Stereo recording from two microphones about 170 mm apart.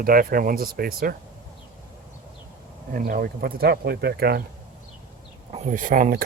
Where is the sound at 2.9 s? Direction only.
55° right (ahead or behind).